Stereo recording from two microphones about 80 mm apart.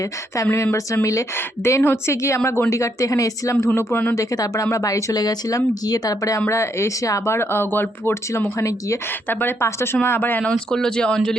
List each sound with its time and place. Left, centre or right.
0.5 s a woman's voice: left
4.1 s speech: left
5.1 s speech: left
6.5 s a woman's voice: left
7.3 s a woman's voice: left
9.3 s speech: left
10.5 s speech: centre